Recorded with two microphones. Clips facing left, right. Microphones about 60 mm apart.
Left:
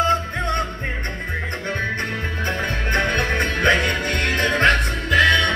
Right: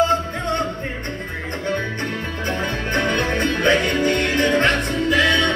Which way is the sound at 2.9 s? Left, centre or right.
Left.